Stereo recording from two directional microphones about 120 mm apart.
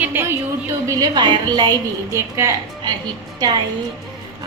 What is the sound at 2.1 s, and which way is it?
Speech, 25° right (ahead or behind).